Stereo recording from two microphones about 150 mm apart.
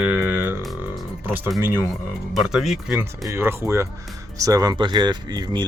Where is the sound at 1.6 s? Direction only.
15° right (ahead or behind).